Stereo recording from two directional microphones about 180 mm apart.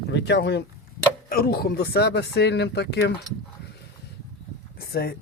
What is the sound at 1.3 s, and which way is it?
Speech, 55° left (ahead or behind).